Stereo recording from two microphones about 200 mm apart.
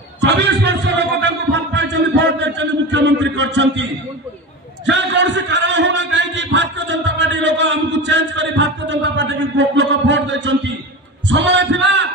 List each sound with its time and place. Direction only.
0.2 s a man's voice: 55° right (ahead or behind)
4.8 s a sound: 60° right (ahead or behind)
11.2 s a man's voice: 65° right (ahead or behind)